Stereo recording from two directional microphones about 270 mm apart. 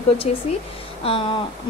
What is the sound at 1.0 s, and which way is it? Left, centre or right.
Speech, centre.